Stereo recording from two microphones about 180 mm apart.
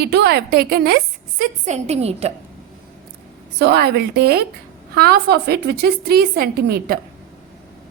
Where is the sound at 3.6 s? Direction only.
65° right (ahead or behind).